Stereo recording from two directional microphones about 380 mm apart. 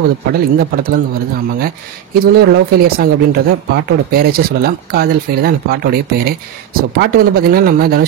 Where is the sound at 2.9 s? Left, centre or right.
Right.